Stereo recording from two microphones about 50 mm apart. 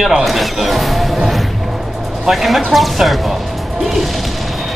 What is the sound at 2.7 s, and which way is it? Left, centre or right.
Speech, centre.